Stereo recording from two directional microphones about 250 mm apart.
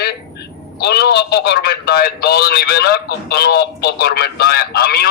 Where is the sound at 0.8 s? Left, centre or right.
Left.